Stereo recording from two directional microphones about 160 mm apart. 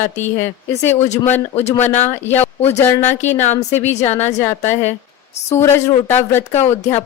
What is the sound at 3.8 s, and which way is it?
A woman's voice, 45° left (ahead or behind).